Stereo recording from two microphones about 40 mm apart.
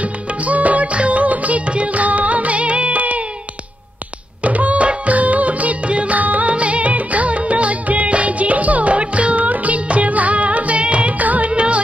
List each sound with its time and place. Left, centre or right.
0.0 s music: right
4.4 s music: right